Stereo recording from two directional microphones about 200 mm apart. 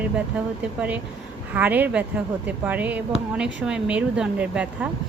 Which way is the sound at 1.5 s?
10° right (ahead or behind).